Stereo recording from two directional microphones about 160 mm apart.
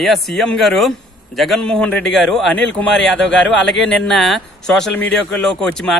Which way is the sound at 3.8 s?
Centre (ahead or behind).